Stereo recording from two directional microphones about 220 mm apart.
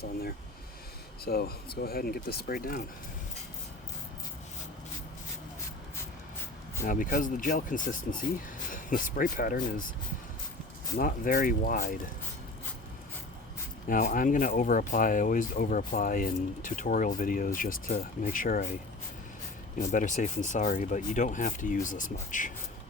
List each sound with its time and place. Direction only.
0.0 s speech: 45° left (ahead or behind)
6.8 s speech: 40° left (ahead or behind)
10.9 s speech: 40° left (ahead or behind)
13.8 s speech: 35° left (ahead or behind)
19.8 s speech: 35° left (ahead or behind)